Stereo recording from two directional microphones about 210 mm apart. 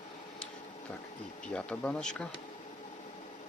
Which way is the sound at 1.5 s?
5° left (ahead or behind).